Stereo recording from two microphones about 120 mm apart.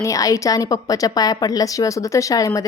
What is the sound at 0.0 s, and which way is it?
A woman's voice, 30° left (ahead or behind).